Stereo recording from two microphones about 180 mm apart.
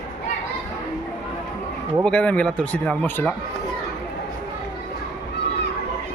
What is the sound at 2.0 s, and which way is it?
Speech, 5° left (ahead or behind).